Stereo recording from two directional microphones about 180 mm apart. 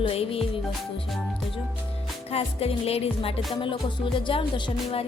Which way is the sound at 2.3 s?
35° left (ahead or behind).